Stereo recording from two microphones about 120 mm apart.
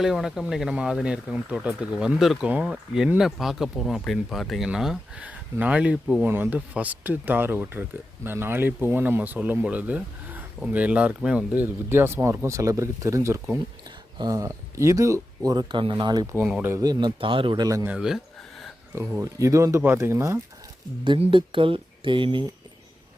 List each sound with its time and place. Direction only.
0.0 s speech: 5° right (ahead or behind); by 16.2 s 40° right (ahead or behind)
16.6 s speech: 20° right (ahead or behind)
16.8 s speech: 35° right (ahead or behind)
17.2 s speech: 45° right (ahead or behind)
17.8 s speech: 5° right (ahead or behind)
18.9 s speech: 25° right (ahead or behind)
21.0 s speech: 45° right (ahead or behind)